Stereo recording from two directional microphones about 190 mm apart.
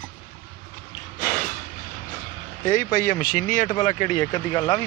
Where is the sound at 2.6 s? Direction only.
45° left (ahead or behind).